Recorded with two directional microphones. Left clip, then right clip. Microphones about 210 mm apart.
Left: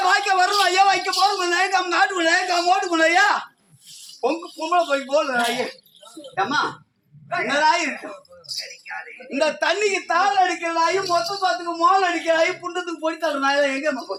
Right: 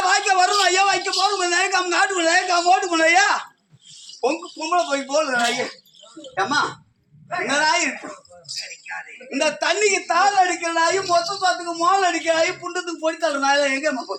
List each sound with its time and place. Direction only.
0.0 s a sound: 10° right (ahead or behind)
1.2 s a man's voice: centre (ahead or behind); by 6.6 s 20° right (ahead or behind)
7.6 s a man's voice: 20° right (ahead or behind)
8.4 s speech: centre (ahead or behind)
9.3 s a man's voice: 15° right (ahead or behind)